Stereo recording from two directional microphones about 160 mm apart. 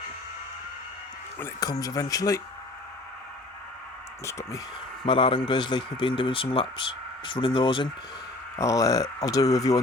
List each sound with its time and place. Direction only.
1.5 s speech: 25° left (ahead or behind)
4.3 s speech: 20° left (ahead or behind)
5.0 s a man's voice: 30° left (ahead or behind)
8.5 s speech: 20° left (ahead or behind)